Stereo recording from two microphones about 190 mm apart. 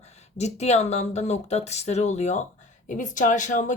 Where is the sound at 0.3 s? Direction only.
35° left (ahead or behind).